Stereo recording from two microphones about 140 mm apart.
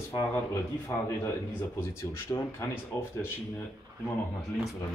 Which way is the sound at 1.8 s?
15° left (ahead or behind).